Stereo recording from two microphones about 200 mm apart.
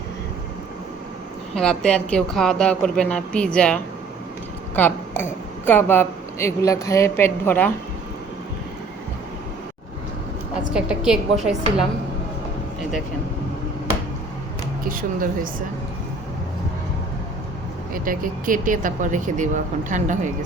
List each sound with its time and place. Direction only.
1.5 s speech: 5° left (ahead or behind)
10.8 s speech: 5° right (ahead or behind)
14.8 s speech: 45° right (ahead or behind)
17.9 s speech: 45° right (ahead or behind)